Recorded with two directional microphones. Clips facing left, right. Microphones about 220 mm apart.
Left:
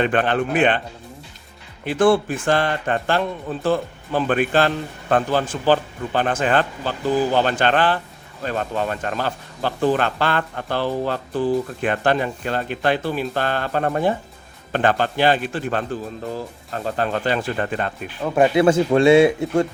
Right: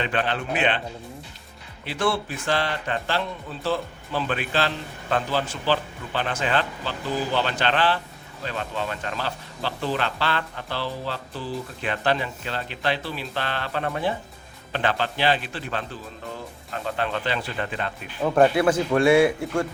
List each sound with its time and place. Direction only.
0.0 s speech: 50° left (ahead or behind)
1.8 s speech: 50° left (ahead or behind)
18.2 s speech: centre (ahead or behind)
18.5 s speech: 25° left (ahead or behind)